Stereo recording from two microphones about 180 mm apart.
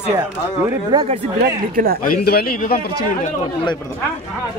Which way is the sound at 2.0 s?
55° left (ahead or behind).